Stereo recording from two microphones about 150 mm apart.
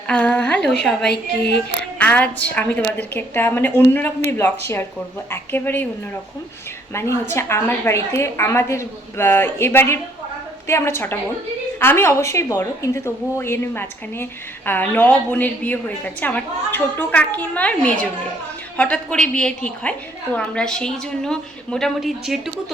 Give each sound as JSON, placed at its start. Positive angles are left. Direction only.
{"t": 0.1, "sound": "a woman's voice", "side_deg": 10}
{"t": 2.0, "sound": "a woman's voice", "side_deg": 10}
{"t": 6.9, "sound": "a woman's voice", "side_deg": 15}